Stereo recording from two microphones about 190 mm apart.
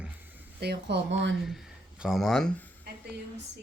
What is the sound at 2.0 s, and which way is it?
Speech, centre (ahead or behind).